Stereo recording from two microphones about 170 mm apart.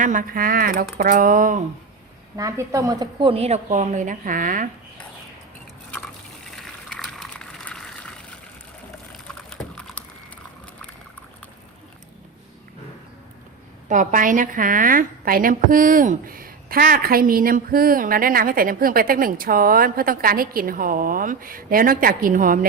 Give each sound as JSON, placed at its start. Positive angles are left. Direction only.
{"t": 0.0, "sound": "a woman's voice", "side_deg": -50}
{"t": 2.3, "sound": "a woman's voice", "side_deg": -20}
{"t": 6.4, "sound": "water", "side_deg": 5}
{"t": 9.5, "sound": "typing", "side_deg": 5}
{"t": 13.8, "sound": "a woman's voice", "side_deg": -50}